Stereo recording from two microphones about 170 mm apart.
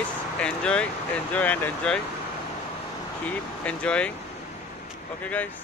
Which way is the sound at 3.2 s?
5° left (ahead or behind).